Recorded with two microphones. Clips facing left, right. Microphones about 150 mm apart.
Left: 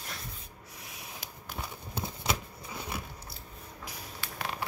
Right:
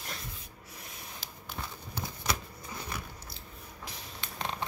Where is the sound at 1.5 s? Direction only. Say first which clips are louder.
Left 2 dB; 20° left (ahead or behind).